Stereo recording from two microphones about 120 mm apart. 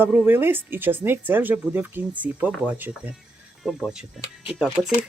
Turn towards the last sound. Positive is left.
turn(degrees=-5)  # may be behind; listen again after turning